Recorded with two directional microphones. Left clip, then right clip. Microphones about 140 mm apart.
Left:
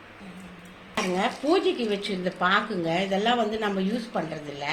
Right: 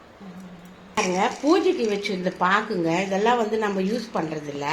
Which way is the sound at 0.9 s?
75° right (ahead or behind).